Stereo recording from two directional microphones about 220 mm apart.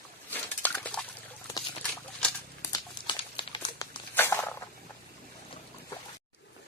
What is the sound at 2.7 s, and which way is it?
Crumpling, 20° left (ahead or behind).